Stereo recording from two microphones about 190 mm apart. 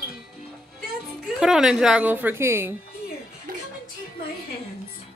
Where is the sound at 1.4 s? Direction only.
Centre (ahead or behind).